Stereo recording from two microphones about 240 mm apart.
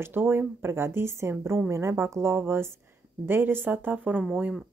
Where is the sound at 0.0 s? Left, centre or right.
Centre.